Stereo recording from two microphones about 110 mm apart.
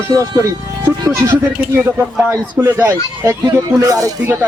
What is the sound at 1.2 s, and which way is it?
A man's voice, 20° right (ahead or behind).